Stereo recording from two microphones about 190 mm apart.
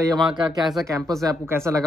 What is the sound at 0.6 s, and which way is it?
Speech, centre (ahead or behind).